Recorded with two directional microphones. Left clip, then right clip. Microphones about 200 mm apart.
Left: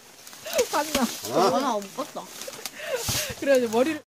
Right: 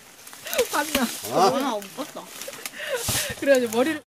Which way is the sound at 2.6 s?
45° left (ahead or behind).